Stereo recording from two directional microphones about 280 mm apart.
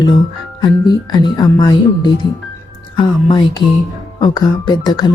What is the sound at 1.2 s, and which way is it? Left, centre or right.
A woman's voice, centre.